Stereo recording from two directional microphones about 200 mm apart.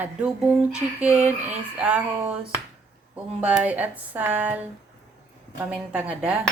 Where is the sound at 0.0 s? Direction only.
5° right (ahead or behind).